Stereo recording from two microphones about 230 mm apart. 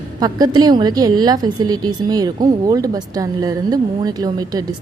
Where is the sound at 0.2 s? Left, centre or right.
Centre.